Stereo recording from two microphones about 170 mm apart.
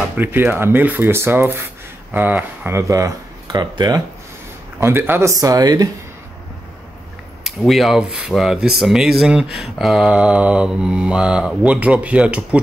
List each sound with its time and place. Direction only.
0.1 s speech: 10° right (ahead or behind)
4.7 s speech: 15° right (ahead or behind)
7.4 s speech: centre (ahead or behind)